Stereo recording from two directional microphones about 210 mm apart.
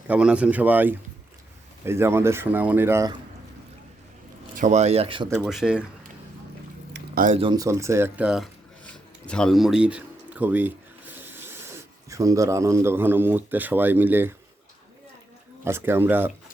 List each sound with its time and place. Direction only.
0.1 s speech: 5° right (ahead or behind)
4.5 s speech: 35° right (ahead or behind)
5.5 s speech: centre (ahead or behind)
6.9 s a sound: 40° right (ahead or behind)
7.3 s speech: 20° right (ahead or behind)
15.6 s speech: 10° right (ahead or behind)